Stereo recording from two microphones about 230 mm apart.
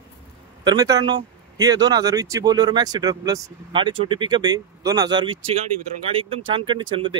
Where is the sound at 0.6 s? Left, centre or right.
Centre.